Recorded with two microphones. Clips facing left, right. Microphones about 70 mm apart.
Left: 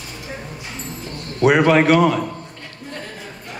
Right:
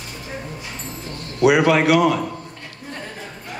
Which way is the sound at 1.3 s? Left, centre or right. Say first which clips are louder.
Left 1 dB; left.